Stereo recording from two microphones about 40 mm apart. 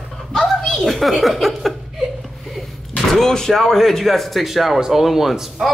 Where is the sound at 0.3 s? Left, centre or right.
Centre.